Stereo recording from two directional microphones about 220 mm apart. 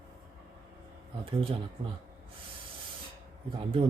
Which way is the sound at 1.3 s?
25° right (ahead or behind).